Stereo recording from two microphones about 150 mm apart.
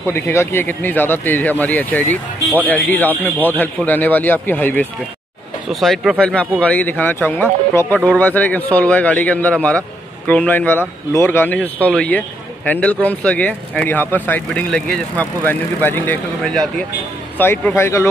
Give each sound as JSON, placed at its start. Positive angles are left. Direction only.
{"t": 0.0, "sound": "speech", "side_deg": 15}
{"t": 5.7, "sound": "speech", "side_deg": 0}